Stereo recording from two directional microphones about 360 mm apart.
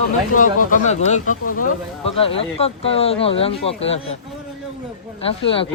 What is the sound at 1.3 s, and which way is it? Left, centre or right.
Speech, left.